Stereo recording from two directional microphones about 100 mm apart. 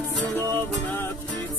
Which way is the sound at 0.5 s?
20° left (ahead or behind).